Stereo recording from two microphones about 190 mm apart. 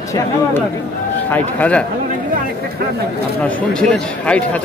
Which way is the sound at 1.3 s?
5° left (ahead or behind).